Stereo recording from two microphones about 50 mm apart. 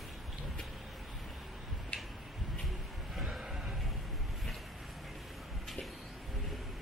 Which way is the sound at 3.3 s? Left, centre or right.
Centre.